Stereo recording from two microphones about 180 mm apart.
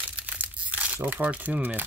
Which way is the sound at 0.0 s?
5° right (ahead or behind).